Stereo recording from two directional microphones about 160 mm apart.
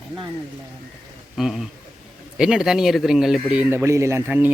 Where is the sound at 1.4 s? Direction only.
Centre (ahead or behind).